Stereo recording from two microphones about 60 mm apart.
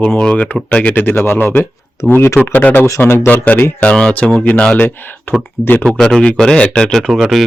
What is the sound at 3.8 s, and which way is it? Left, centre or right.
Speech, centre.